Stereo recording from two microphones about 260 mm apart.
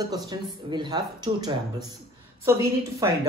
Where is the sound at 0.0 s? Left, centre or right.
Centre.